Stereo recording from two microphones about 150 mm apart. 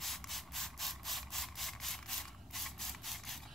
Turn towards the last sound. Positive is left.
turn(degrees=0)  # may be behind; listen again after turning